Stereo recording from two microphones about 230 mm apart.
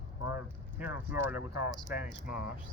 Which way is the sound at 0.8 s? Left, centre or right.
Centre.